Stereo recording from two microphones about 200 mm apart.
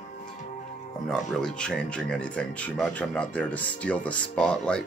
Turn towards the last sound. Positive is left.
turn(degrees=5)  # may be behind; listen again after turning